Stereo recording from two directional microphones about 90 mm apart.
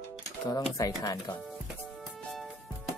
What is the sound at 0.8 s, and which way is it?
Speech, 40° left (ahead or behind).